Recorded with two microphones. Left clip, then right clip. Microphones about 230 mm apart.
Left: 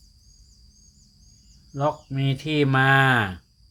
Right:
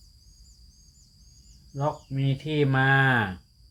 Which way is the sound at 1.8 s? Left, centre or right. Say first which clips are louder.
Left 4 dB; left.